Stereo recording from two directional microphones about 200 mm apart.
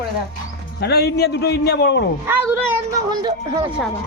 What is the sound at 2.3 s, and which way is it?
A woman's voice, 10° right (ahead or behind).